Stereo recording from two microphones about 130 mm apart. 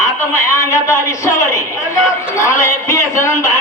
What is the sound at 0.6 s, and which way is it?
A man's voice, 25° left (ahead or behind).